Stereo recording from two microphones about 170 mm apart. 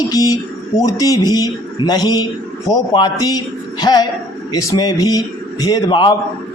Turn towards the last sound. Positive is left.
turn(degrees=25)  # may be behind; listen again after turning